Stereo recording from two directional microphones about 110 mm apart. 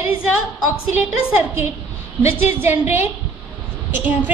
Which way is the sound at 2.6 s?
20° right (ahead or behind).